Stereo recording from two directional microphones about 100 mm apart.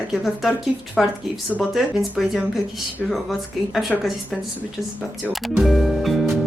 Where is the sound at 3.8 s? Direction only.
Centre (ahead or behind).